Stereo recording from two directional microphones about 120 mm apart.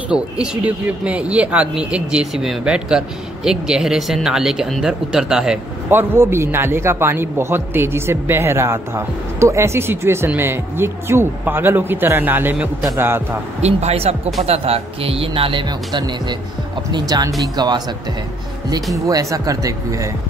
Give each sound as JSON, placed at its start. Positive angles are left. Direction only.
{"t": 0.1, "sound": "speech", "side_deg": -10}
{"t": 5.9, "sound": "speech", "side_deg": -20}
{"t": 13.6, "sound": "speech", "side_deg": -65}
{"t": 19.0, "sound": "speech", "side_deg": -30}